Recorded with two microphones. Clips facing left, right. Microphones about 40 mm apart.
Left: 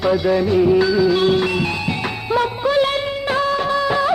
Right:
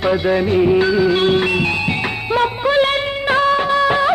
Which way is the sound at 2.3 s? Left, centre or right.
Right.